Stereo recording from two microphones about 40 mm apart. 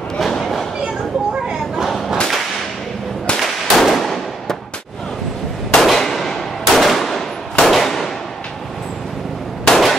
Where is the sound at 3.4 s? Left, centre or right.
Centre.